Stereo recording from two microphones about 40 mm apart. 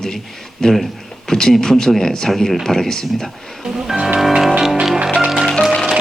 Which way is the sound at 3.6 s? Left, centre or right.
Centre.